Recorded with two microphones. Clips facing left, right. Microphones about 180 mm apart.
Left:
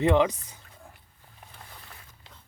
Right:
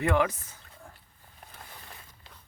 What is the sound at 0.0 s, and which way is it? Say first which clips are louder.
Speech: left 4 dB; 20° left (ahead or behind).